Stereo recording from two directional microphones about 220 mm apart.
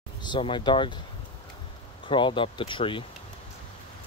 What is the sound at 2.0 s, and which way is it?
Speech, 20° left (ahead or behind).